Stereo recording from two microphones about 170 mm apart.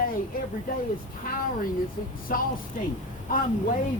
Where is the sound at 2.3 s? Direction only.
55° left (ahead or behind).